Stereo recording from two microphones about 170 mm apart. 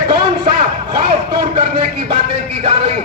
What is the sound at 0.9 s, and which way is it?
A man's voice, 30° right (ahead or behind).